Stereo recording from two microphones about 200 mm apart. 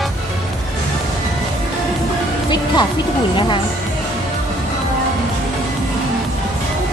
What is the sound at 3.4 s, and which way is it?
Speech, 25° left (ahead or behind).